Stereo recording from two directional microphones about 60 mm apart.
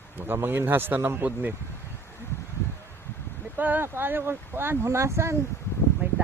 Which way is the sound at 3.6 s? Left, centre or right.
Right.